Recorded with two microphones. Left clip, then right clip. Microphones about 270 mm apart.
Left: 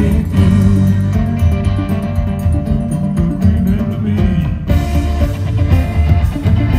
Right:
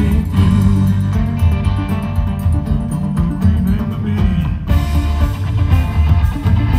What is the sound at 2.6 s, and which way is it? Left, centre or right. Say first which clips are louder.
Music: left 3 dB; centre.